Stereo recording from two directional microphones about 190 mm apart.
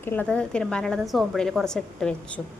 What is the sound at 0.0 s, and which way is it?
A woman's voice, 10° left (ahead or behind).